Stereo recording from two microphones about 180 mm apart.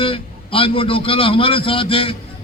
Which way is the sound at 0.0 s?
30° left (ahead or behind).